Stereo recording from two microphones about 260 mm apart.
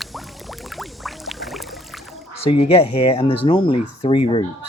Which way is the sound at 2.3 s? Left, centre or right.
Left.